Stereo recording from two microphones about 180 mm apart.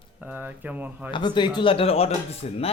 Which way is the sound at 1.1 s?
25° left (ahead or behind).